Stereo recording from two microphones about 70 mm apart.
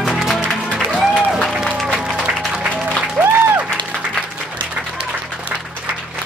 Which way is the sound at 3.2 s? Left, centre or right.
Right.